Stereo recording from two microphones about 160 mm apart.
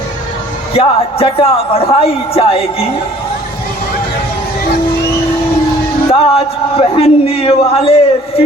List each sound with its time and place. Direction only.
0.7 s speech: 35° left (ahead or behind)
6.1 s speech: 35° left (ahead or behind)